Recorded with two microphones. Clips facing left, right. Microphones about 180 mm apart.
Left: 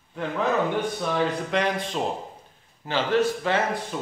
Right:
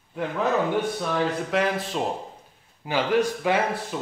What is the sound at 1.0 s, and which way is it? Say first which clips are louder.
Speech: even; 5° right (ahead or behind).